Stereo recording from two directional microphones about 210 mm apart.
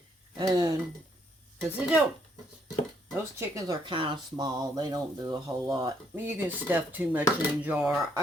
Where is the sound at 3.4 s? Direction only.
15° right (ahead or behind).